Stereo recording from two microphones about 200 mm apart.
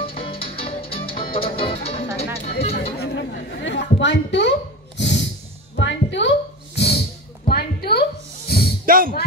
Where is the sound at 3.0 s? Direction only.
60° left (ahead or behind).